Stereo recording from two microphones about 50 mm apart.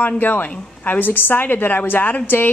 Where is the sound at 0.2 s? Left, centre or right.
Left.